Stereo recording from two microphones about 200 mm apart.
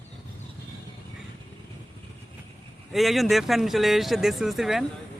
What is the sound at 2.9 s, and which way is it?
Speech, centre (ahead or behind).